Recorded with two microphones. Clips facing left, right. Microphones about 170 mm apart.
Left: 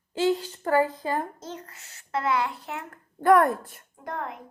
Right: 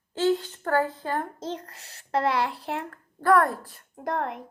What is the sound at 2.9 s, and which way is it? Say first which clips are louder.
Speech: left 2 dB; 20° left (ahead or behind).